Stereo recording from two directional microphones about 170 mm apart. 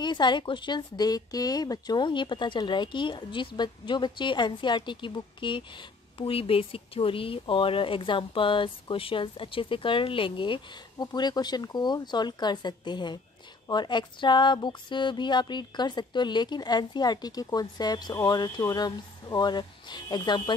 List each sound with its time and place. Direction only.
0.0 s a woman's voice: 25° left (ahead or behind)